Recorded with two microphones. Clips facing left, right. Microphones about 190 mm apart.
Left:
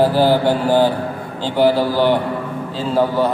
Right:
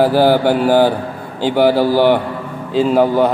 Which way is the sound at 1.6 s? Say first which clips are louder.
Right 2 dB; 60° right (ahead or behind).